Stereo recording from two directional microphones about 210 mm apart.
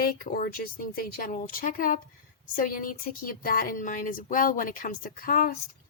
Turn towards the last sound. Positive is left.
turn(degrees=45)  # may be behind; listen again after turning